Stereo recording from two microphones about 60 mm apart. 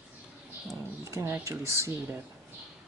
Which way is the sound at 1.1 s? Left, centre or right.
Right.